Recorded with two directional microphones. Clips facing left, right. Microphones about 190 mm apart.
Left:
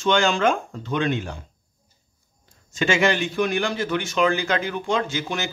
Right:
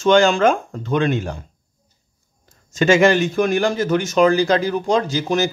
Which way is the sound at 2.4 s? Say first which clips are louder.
Right 7 dB; 45° right (ahead or behind).